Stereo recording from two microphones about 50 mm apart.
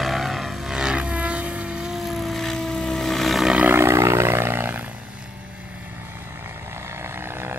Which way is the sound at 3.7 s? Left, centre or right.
Right.